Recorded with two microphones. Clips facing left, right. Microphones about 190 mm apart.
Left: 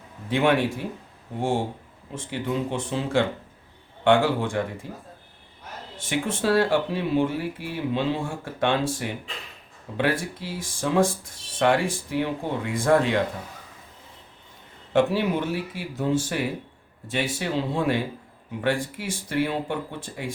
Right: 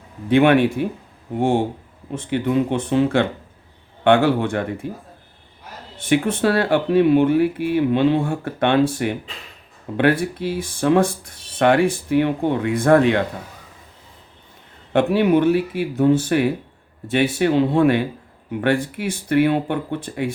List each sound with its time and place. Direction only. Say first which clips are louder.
0.3 s speech: right 7 dB; 60° right (ahead or behind)
6.0 s speech: right 8 dB; 60° right (ahead or behind)
14.9 s speech: right 6 dB; 60° right (ahead or behind)